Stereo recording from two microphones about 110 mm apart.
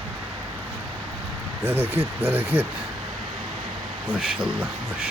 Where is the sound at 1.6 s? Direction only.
20° right (ahead or behind).